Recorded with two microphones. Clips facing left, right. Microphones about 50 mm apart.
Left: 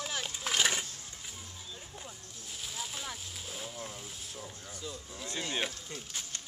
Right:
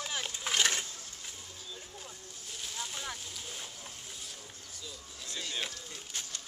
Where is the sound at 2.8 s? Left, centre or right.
Centre.